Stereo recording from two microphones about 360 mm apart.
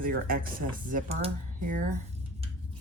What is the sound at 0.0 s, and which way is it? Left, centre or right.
Speech, right.